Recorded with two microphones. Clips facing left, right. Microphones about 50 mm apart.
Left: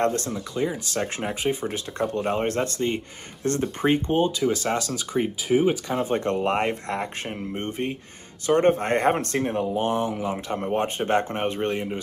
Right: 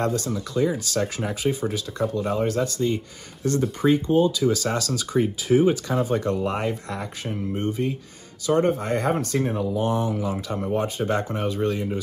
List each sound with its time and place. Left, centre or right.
0.0 s speech: left
0.3 s speech: left
1.0 s speech: left
2.0 s speech: left
6.0 s speech: left
10.5 s speech: left